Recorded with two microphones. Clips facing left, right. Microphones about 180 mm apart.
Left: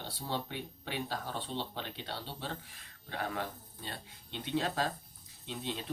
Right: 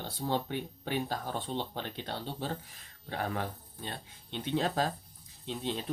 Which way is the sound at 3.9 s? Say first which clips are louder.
Right 3 dB; 50° right (ahead or behind).